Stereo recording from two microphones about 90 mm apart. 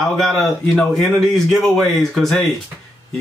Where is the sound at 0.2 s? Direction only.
5° left (ahead or behind).